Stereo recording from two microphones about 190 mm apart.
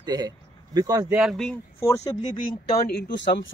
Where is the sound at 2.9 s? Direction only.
65° left (ahead or behind).